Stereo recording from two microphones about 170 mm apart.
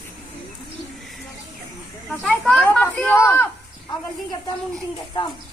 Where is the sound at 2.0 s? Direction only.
Centre (ahead or behind).